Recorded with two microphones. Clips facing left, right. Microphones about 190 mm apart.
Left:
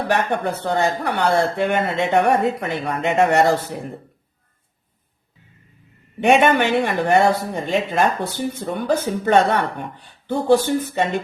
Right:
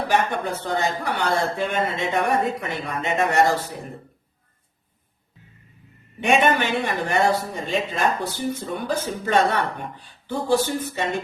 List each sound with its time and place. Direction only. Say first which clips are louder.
0.1 s speech: left 2 dB; 60° left (ahead or behind)
6.1 s speech: left 4 dB; 60° left (ahead or behind)